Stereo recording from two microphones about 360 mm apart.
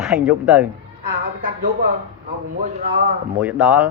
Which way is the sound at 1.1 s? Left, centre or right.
Right.